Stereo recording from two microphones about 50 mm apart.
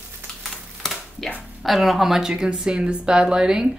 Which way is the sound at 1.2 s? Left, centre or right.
Centre.